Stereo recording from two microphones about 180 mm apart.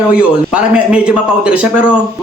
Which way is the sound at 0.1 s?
5° right (ahead or behind).